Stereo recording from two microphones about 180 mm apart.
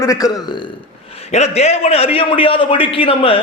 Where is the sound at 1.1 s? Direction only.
35° left (ahead or behind).